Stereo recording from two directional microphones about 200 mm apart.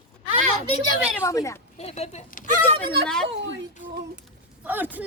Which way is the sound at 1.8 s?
30° left (ahead or behind).